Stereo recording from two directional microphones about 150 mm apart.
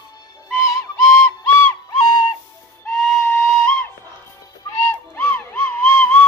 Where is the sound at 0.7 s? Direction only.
15° left (ahead or behind).